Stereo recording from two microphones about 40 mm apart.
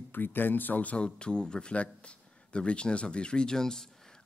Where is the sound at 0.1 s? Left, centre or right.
Left.